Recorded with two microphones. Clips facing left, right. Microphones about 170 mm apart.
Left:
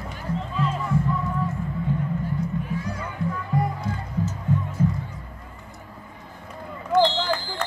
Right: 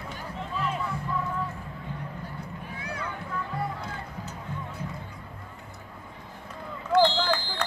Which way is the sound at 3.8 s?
60° right (ahead or behind).